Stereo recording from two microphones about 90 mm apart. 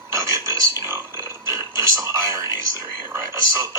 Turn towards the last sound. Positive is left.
turn(degrees=-35)  # may be behind; listen again after turning